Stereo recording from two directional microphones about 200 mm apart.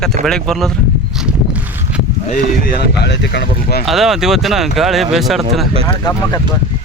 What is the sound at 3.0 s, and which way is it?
Speech, 60° left (ahead or behind).